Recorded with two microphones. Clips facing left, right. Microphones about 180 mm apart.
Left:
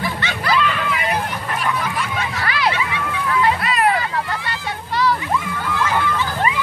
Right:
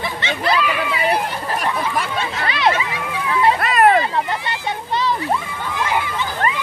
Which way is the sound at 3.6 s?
50° right (ahead or behind).